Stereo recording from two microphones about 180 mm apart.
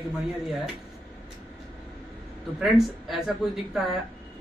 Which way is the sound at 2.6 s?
Centre (ahead or behind).